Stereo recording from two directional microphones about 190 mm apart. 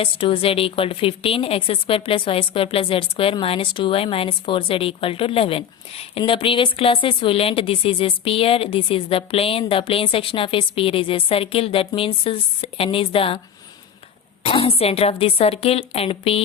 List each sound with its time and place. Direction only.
0.0 s a woman's voice: 30° left (ahead or behind)
14.4 s a woman's voice: 30° left (ahead or behind)